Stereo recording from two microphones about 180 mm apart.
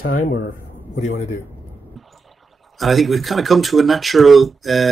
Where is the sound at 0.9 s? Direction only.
45° left (ahead or behind).